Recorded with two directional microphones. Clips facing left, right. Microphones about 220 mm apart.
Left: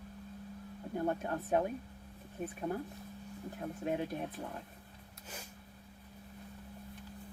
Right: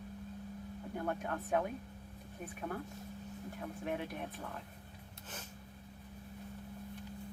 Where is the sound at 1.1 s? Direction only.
25° left (ahead or behind).